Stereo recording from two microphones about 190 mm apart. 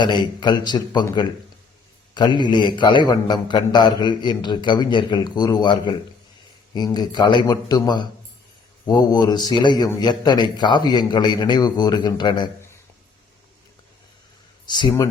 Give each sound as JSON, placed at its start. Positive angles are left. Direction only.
{"t": 0.0, "sound": "a man's voice", "side_deg": 25}
{"t": 14.7, "sound": "a man's voice", "side_deg": 20}